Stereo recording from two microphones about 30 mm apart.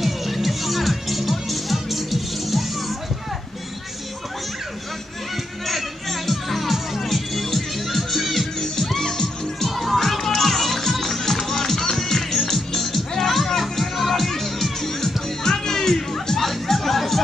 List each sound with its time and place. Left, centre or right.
0.0 s music: centre
5.7 s music: centre
8.9 s music: centre
9.7 s music: centre
16.3 s music: centre